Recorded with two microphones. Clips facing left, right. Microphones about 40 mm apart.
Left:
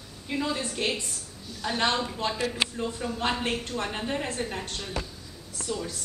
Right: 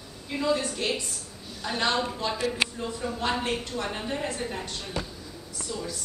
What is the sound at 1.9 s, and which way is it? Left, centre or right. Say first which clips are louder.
Speech: right 1 dB; centre.